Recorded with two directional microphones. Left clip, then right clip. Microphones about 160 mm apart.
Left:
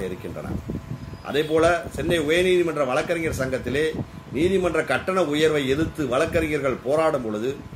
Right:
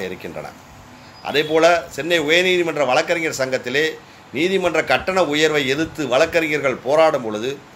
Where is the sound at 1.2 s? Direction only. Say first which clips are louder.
Right 5 dB; 10° left (ahead or behind).